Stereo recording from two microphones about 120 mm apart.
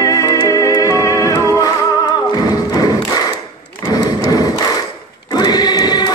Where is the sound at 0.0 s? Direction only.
30° left (ahead or behind).